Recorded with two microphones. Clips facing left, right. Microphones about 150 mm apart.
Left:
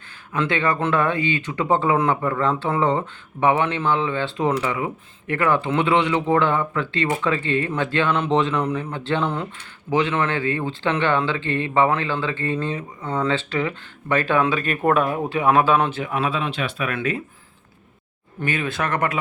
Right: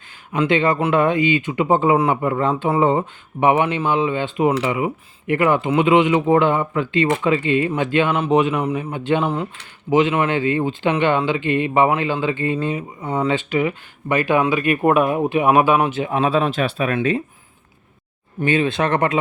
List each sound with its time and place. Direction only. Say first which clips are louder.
0.3 s speech: right 4 dB; 20° right (ahead or behind)
16.0 s speech: right 6 dB; 30° right (ahead or behind)
18.3 s speech: right 6 dB; 25° right (ahead or behind)